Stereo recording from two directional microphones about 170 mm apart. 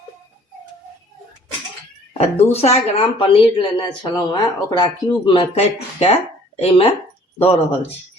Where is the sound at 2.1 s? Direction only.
35° left (ahead or behind).